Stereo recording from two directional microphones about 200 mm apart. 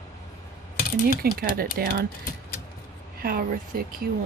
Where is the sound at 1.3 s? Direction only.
45° right (ahead or behind).